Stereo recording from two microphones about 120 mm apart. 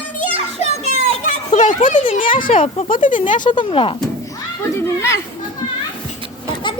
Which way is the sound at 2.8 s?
90° left.